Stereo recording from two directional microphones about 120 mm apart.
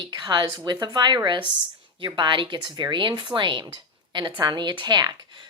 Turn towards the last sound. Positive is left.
turn(degrees=-40)  # may be behind; listen again after turning